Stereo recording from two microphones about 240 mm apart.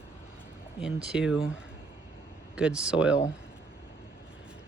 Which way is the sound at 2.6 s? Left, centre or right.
Centre.